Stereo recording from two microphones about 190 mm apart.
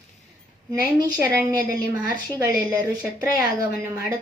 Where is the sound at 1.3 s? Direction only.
15° right (ahead or behind).